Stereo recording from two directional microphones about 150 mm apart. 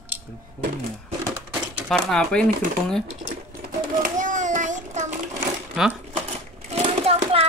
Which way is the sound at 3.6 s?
60° right (ahead or behind).